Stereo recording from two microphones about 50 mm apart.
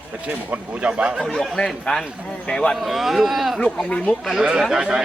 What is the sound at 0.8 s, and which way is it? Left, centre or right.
Speech, right.